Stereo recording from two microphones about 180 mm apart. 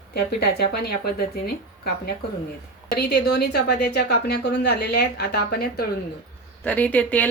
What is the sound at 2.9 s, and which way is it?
A woman's voice, 65° left (ahead or behind).